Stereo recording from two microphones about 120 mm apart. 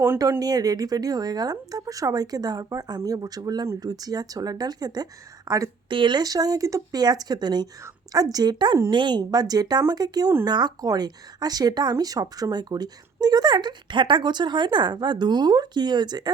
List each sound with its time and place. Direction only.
0.2 s speech: 30° right (ahead or behind)
5.9 s speech: 40° right (ahead or behind)